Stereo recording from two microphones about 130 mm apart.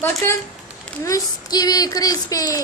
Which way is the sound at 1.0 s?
25° left (ahead or behind).